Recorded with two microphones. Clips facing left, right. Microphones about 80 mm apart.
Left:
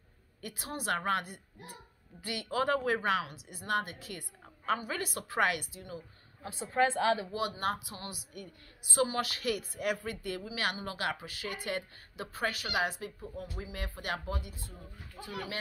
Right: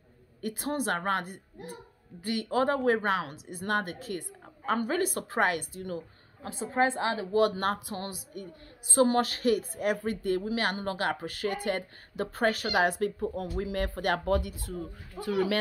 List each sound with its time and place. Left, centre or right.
0.4 s a woman's voice: right
6.6 s speech: right
7.3 s a woman's voice: right